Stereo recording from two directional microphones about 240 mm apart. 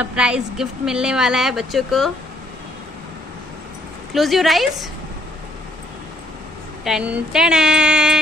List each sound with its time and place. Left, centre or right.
0.0 s a woman's voice: centre
4.1 s a woman's voice: centre
6.8 s a woman's voice: centre